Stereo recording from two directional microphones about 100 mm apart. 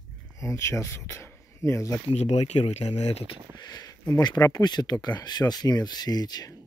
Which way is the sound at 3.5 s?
45° left (ahead or behind).